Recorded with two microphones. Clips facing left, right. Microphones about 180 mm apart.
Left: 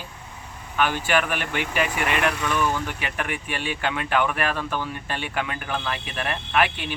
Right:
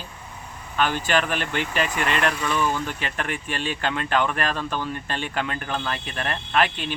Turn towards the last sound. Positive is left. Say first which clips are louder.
# even
turn(degrees=10)  # may be behind; listen again after turning